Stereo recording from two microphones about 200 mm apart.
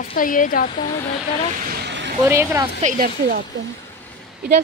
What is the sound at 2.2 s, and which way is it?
Speech, 15° right (ahead or behind).